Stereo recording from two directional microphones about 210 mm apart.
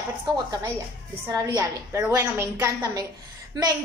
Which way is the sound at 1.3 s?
15° right (ahead or behind).